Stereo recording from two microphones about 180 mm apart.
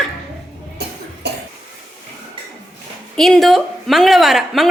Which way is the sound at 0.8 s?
65° right (ahead or behind).